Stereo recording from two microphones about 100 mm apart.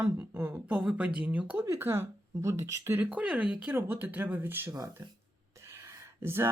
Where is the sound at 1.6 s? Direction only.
30° right (ahead or behind).